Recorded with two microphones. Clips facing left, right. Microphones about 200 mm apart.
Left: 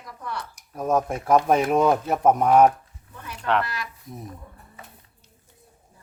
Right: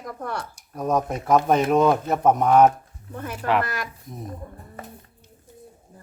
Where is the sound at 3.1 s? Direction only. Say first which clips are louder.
Right 2 dB; 50° right (ahead or behind).